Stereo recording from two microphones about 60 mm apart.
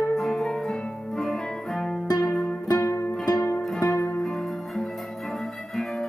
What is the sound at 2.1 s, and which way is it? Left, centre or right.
Music, left.